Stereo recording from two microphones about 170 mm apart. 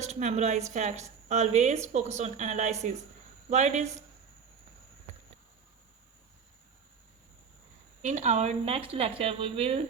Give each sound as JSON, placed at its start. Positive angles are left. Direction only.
{"t": 0.0, "sound": "a woman's voice", "side_deg": -45}
{"t": 8.0, "sound": "speech", "side_deg": -45}